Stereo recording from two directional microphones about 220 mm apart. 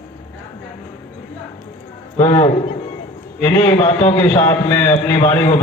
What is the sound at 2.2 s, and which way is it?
A man's voice, 15° left (ahead or behind).